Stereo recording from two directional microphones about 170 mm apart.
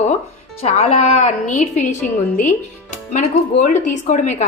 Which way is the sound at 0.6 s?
40° left (ahead or behind).